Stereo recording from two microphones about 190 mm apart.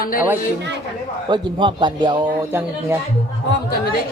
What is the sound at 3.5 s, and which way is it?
Speech, 55° left (ahead or behind).